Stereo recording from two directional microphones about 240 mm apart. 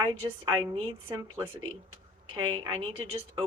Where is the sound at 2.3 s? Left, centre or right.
Right.